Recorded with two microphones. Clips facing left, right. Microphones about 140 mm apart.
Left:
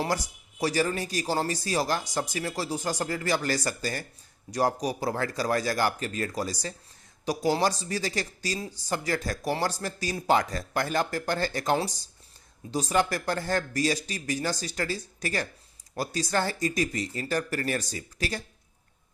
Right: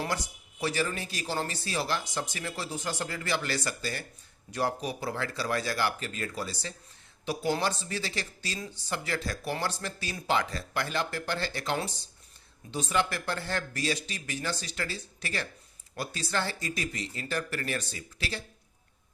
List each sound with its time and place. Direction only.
0.6 s speech: 40° left (ahead or behind)